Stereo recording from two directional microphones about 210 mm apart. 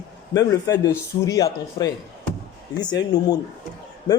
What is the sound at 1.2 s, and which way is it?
Speech, 15° left (ahead or behind).